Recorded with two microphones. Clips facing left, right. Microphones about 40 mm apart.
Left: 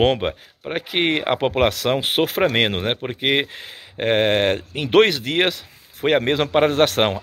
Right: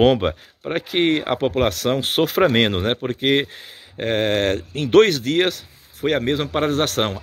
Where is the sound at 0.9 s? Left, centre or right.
Left.